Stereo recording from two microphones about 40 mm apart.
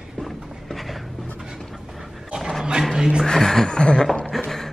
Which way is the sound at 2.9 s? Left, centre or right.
Centre.